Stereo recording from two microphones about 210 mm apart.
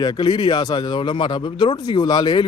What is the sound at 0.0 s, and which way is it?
Speech, 20° left (ahead or behind).